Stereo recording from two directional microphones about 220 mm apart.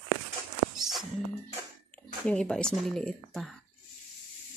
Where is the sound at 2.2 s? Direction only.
5° left (ahead or behind).